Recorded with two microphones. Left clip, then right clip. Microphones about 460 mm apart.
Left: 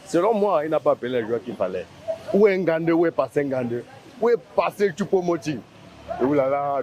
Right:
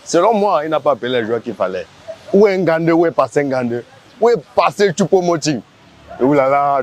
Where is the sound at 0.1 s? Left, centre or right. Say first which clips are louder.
Right 7 dB; right.